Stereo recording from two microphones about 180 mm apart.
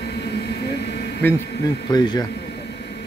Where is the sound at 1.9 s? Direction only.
20° left (ahead or behind).